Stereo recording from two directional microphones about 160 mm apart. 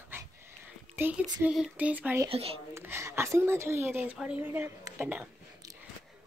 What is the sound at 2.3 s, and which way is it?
Speech, 35° right (ahead or behind).